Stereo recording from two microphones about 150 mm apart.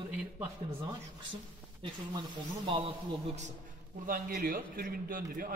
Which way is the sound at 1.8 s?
30° right (ahead or behind).